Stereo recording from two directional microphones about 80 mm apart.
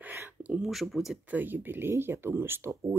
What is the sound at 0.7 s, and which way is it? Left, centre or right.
Speech, centre.